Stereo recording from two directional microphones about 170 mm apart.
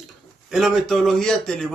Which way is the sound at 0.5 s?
Centre (ahead or behind).